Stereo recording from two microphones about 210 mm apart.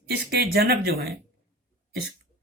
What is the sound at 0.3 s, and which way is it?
Speech, 45° right (ahead or behind).